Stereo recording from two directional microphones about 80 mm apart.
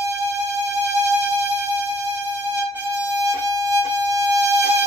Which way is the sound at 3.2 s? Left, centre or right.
Right.